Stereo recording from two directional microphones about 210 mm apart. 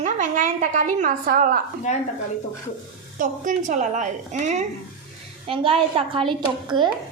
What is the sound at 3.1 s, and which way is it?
A child's voice, 40° right (ahead or behind).